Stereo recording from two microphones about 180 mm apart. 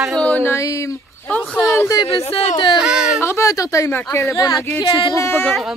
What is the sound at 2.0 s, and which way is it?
Speech, 35° left (ahead or behind).